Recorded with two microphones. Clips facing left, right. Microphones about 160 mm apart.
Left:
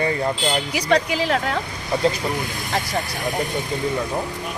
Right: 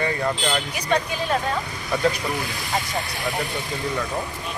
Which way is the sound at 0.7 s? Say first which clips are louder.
Left 4 dB; 90° left.